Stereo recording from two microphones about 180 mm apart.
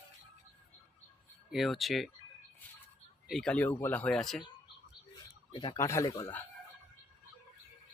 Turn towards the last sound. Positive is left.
turn(degrees=15)  # may be behind; listen again after turning